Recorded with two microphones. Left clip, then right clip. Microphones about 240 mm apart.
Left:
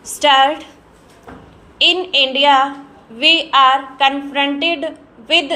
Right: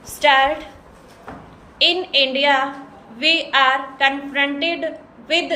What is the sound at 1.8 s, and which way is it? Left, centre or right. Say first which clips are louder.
A woman's voice: left 3 dB; centre.